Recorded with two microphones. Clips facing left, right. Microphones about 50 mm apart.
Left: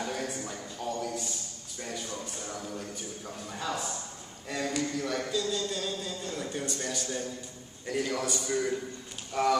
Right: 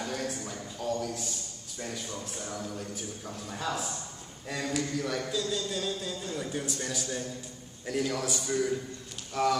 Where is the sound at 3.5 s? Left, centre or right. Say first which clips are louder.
Even; centre.